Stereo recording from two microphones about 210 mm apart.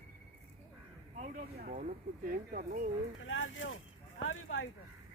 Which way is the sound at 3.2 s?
65° left (ahead or behind).